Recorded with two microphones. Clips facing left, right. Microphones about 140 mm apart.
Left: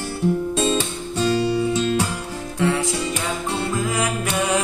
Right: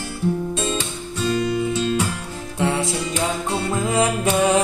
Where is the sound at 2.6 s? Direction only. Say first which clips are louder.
Left 1 dB; 25° right (ahead or behind).